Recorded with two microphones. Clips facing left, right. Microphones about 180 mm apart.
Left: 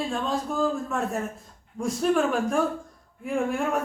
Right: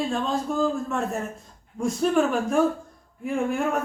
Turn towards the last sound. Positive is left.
turn(degrees=0)  # may be behind; listen again after turning